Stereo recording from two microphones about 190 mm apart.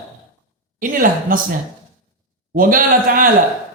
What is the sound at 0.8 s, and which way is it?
Speech, 45° right (ahead or behind).